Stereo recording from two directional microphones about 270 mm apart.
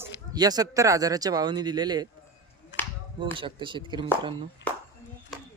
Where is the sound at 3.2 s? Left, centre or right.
Centre.